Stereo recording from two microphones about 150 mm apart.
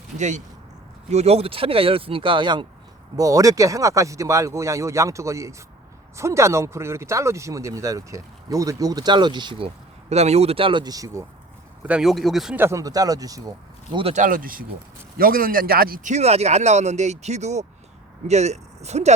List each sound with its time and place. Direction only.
0.2 s a man's voice: 50° right (ahead or behind); by 11.3 s 20° right (ahead or behind)
11.9 s speech: 5° right (ahead or behind)
12.5 s speech: 20° right (ahead or behind)
14.1 s a man's voice: 60° right (ahead or behind)